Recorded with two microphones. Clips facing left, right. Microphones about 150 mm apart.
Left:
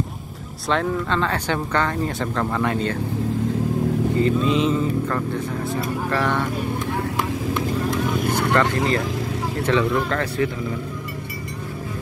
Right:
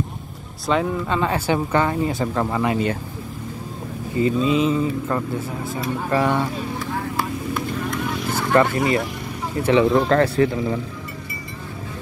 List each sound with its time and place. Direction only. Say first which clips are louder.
0.7 s speech: right 1 dB; 5° right (ahead or behind)
4.2 s mantra: right 3 dB; 5° right (ahead or behind)
6.0 s speech: right 4 dB; 15° right (ahead or behind)
8.5 s speech: right 6 dB; 10° right (ahead or behind)
9.9 s speech: right 6 dB; 35° right (ahead or behind)